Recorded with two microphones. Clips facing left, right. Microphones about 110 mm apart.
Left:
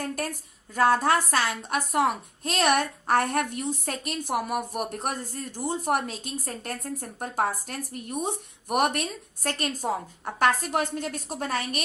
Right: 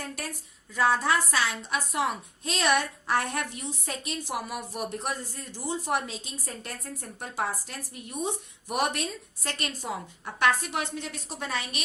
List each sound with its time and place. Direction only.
0.0 s a woman's voice: 45° left (ahead or behind)